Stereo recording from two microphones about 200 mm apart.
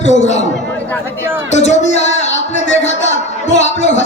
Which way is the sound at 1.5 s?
35° left (ahead or behind).